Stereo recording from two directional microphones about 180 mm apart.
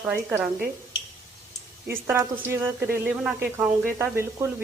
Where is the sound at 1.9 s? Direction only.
15° right (ahead or behind).